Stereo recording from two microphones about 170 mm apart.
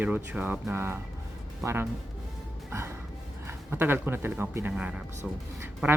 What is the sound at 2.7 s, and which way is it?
Music, 15° right (ahead or behind).